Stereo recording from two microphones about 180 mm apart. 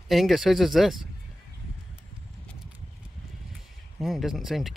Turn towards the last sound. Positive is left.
turn(degrees=0)  # may be behind; listen again after turning